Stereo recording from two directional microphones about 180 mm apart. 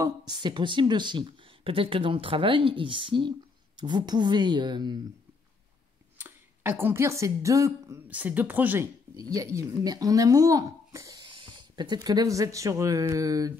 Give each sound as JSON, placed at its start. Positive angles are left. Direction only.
{"t": 0.0, "sound": "speech", "side_deg": -25}
{"t": 6.1, "sound": "speech", "side_deg": -10}